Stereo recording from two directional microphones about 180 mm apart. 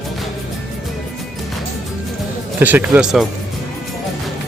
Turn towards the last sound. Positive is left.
turn(degrees=-5)  # may be behind; listen again after turning